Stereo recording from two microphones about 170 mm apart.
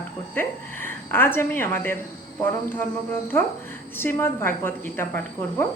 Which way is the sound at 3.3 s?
15° left (ahead or behind).